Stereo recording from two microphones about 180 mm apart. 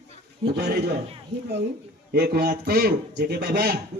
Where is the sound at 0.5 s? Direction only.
65° right (ahead or behind).